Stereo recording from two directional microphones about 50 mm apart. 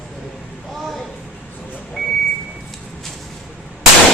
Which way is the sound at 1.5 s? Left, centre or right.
Left.